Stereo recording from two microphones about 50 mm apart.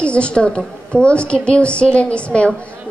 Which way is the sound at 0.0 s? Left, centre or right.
Left.